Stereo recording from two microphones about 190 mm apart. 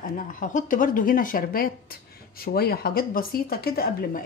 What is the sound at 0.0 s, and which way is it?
Speech, 45° left (ahead or behind).